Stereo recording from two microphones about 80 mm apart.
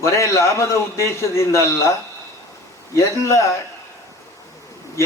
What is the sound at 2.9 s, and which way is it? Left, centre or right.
Speech, left.